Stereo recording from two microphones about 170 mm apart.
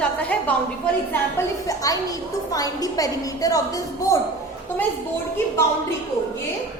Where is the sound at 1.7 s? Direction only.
20° left (ahead or behind).